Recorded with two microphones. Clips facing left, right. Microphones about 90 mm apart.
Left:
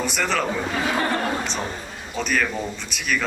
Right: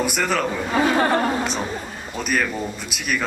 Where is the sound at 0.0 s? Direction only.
5° right (ahead or behind).